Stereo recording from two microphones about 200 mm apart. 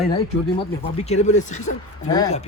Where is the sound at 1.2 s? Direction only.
35° left (ahead or behind).